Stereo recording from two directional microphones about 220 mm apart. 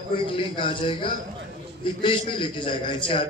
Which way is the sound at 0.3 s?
25° left (ahead or behind).